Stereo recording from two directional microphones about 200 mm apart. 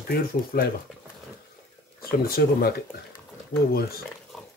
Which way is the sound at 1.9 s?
50° left (ahead or behind).